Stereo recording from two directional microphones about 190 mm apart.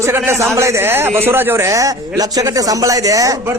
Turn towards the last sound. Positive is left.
turn(degrees=-15)  # may be behind; listen again after turning